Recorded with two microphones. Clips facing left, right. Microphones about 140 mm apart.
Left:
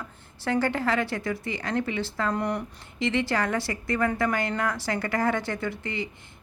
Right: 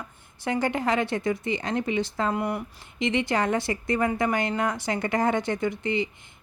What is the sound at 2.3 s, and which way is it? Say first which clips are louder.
Speech: even; 5° right (ahead or behind).